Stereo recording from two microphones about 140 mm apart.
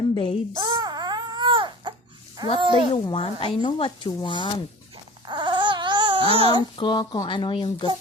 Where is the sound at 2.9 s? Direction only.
40° left (ahead or behind).